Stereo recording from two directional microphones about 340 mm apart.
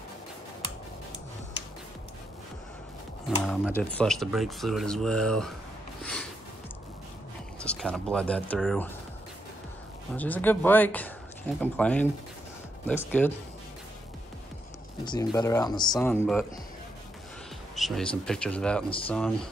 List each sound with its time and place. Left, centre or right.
3.3 s speech: centre
7.6 s speech: centre
10.1 s speech: centre
15.0 s speech: centre
17.7 s speech: centre